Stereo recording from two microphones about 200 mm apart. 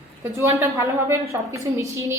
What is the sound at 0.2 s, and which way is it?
A woman's voice, 15° right (ahead or behind).